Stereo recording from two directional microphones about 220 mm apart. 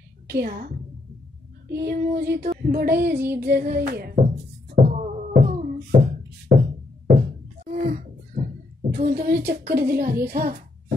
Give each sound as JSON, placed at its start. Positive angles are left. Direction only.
{"t": 0.3, "sound": "child singing", "side_deg": -45}
{"t": 4.7, "sound": "music", "side_deg": -30}
{"t": 7.2, "sound": "a sound", "side_deg": -35}
{"t": 8.9, "sound": "child singing", "side_deg": -40}